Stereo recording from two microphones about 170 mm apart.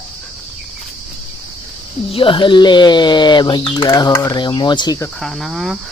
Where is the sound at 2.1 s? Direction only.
30° left (ahead or behind).